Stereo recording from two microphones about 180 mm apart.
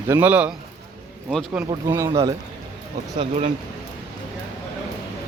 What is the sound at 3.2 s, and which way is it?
Speech, 35° right (ahead or behind).